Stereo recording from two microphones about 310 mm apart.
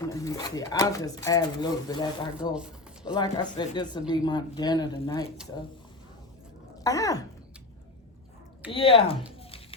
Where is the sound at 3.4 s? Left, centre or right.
Centre.